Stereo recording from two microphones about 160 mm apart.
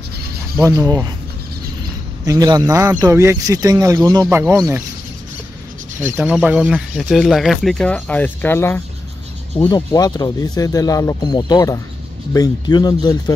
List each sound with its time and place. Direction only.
0.7 s speech: 20° right (ahead or behind)
2.2 s speech: 25° right (ahead or behind)
6.0 s speech: 15° right (ahead or behind); by 8.8 s 15° left (ahead or behind)
9.7 s speech: 25° left (ahead or behind)